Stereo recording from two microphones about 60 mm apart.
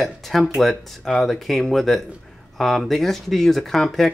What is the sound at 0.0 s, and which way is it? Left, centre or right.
Speech, centre.